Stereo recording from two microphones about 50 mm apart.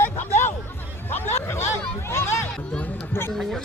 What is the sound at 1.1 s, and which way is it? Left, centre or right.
Speech, left.